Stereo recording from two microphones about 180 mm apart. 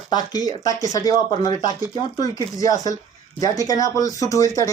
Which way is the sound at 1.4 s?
20° left (ahead or behind).